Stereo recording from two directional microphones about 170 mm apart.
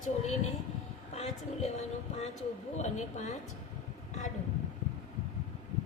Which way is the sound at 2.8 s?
40° left (ahead or behind).